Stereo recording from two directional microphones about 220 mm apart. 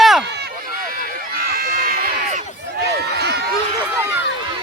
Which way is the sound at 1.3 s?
40° right (ahead or behind).